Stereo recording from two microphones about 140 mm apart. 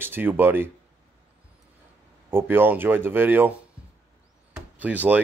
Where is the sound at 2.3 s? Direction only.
15° right (ahead or behind).